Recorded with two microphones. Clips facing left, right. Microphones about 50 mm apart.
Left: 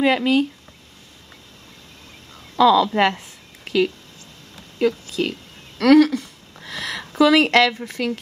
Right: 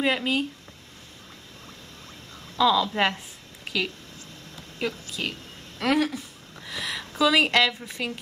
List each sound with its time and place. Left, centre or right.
0.0 s speech: left
2.5 s speech: left
4.7 s a woman's voice: left
5.8 s speech: left
6.7 s a sound: left
7.0 s a woman's voice: left